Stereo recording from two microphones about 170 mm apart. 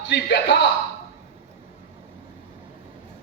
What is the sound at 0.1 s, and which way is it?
Speech, 85° left.